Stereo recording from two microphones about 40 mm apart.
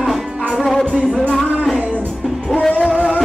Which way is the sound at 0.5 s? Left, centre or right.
Centre.